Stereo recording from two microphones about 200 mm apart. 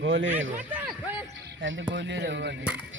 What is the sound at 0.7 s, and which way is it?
Speech, 10° right (ahead or behind).